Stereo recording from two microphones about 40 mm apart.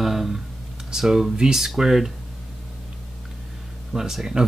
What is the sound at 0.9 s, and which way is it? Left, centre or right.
Speech, centre.